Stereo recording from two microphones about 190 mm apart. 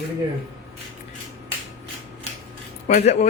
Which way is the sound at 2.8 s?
35° left (ahead or behind).